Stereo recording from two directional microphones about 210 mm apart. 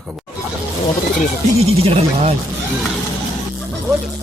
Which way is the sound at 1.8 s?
30° right (ahead or behind).